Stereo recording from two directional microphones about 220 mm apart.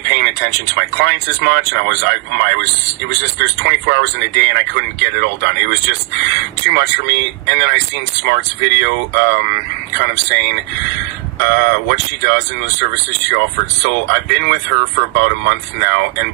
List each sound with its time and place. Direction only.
0.0 s speech: 50° right (ahead or behind)